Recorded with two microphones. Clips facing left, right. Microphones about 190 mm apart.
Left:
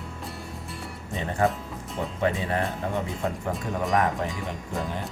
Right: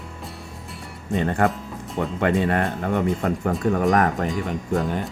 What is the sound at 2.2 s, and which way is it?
Speech, 65° right (ahead or behind).